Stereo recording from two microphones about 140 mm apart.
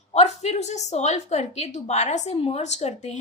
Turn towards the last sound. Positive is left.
turn(degrees=55)  # may be behind; listen again after turning